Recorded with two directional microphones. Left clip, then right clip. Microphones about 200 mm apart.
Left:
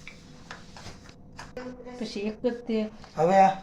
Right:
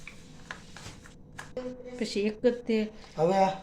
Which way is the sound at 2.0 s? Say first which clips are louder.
Right 3 dB; 50° right (ahead or behind).